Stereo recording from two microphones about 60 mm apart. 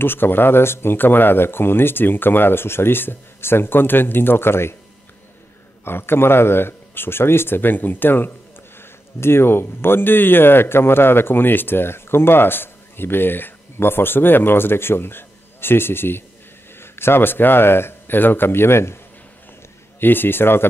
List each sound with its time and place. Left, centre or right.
0.0 s speech: left
5.9 s speech: left
20.0 s speech: left